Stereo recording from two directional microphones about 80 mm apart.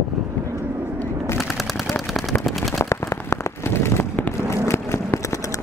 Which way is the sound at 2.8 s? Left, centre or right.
Left.